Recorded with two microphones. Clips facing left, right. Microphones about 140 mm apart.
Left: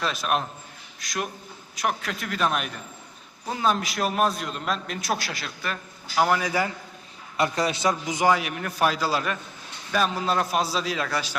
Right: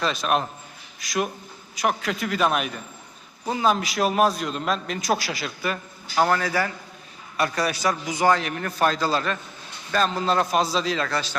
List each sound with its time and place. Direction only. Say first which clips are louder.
0.0 s a man's voice: right 3 dB; centre (ahead or behind)
6.2 s a man's voice: even; 10° left (ahead or behind)
8.3 s a man's voice: right 1 dB; 10° left (ahead or behind)